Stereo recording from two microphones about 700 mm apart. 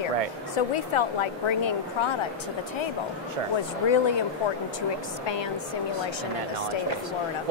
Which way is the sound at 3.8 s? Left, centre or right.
Left.